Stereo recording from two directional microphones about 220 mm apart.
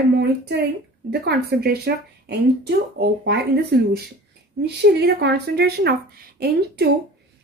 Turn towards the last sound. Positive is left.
turn(degrees=-45)  # may be behind; listen again after turning